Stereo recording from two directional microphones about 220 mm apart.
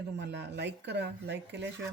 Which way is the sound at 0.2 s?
50° right (ahead or behind).